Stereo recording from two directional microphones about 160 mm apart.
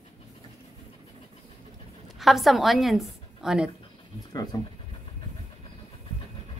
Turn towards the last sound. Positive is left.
turn(degrees=25)  # may be behind; listen again after turning